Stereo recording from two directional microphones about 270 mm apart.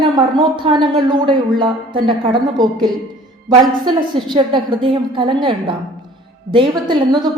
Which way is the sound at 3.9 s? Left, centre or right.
Centre.